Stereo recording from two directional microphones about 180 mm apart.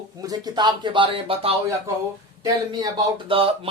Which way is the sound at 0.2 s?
20° right (ahead or behind).